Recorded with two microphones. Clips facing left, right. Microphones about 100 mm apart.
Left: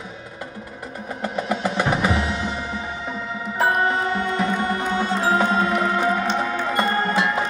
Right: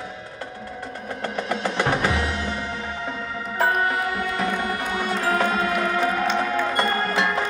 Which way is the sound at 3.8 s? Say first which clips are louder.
Left 3 dB; 25° left (ahead or behind).